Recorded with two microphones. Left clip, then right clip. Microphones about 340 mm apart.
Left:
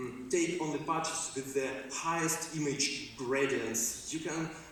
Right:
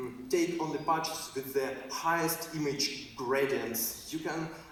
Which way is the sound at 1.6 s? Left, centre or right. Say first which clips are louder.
Right 2 dB; right.